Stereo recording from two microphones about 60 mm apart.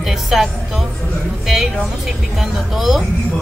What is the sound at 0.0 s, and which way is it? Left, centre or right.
A woman's voice, centre.